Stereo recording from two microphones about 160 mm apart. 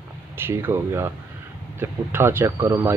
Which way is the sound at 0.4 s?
15° right (ahead or behind).